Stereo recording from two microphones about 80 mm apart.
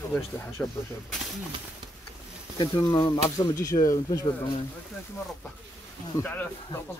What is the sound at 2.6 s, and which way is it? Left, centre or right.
Speech, left.